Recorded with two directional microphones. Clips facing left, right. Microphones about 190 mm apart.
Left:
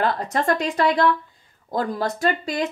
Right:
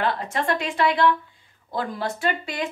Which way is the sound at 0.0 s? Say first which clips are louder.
Left 3 dB; 40° left (ahead or behind).